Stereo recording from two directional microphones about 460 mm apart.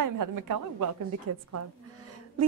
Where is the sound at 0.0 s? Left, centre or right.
Right.